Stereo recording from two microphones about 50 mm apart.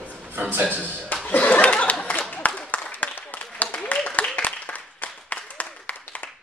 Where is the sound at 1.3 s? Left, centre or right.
Left.